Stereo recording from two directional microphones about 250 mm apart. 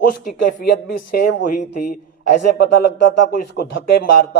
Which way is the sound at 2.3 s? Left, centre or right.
Left.